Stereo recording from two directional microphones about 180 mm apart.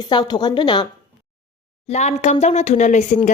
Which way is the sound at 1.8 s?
40° left (ahead or behind).